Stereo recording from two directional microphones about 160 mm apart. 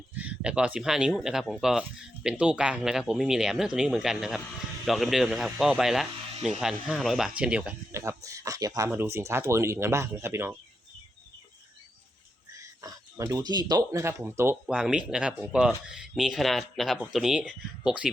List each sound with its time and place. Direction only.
0.1 s speech: 10° right (ahead or behind)
7.9 s speech: 20° right (ahead or behind)
12.5 s speech: 20° right (ahead or behind); by 18.1 s 5° right (ahead or behind)